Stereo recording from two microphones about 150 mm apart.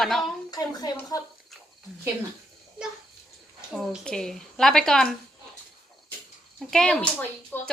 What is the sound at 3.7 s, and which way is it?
A woman's voice, centre (ahead or behind).